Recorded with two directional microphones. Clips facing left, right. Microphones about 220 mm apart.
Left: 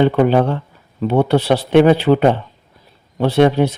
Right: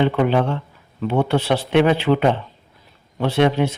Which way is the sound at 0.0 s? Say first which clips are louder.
Left 4 dB; 40° left (ahead or behind).